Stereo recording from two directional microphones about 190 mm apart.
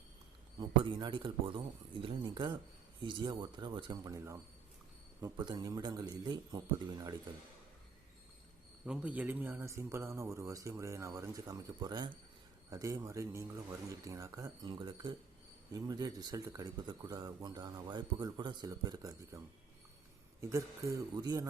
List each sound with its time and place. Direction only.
0.6 s speech: 25° right (ahead or behind)
8.9 s a man's voice: 5° right (ahead or behind)
20.4 s a man's voice: 15° right (ahead or behind)